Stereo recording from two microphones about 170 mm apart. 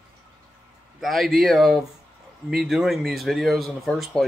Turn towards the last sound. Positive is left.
turn(degrees=0)  # may be behind; listen again after turning